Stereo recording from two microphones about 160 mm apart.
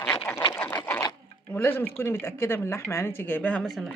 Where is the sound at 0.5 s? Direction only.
15° left (ahead or behind).